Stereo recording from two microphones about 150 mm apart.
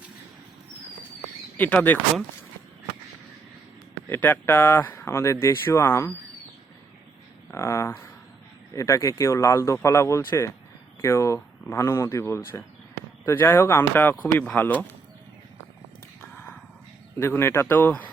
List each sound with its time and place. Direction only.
1.5 s speech: 10° left (ahead or behind)
4.1 s speech: 15° left (ahead or behind)
7.5 s speech: 20° left (ahead or behind)
17.2 s speech: 15° left (ahead or behind)